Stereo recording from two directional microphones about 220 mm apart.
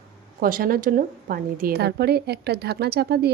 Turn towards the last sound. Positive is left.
turn(degrees=-45)  # may be behind; listen again after turning